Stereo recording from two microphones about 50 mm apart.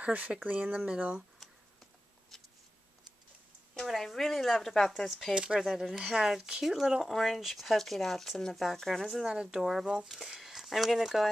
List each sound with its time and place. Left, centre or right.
0.0 s speech: right
3.8 s speech: centre
5.3 s speech: centre
5.6 s speech: centre
9.0 s speech: centre